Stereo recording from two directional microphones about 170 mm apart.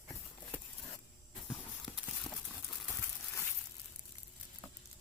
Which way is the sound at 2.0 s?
Centre (ahead or behind).